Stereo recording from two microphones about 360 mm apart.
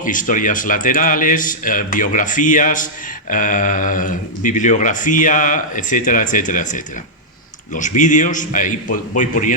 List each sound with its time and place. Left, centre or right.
0.0 s speech: left